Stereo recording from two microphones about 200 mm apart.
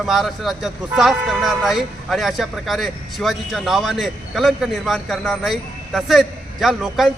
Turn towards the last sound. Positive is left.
turn(degrees=0)  # may be behind; listen again after turning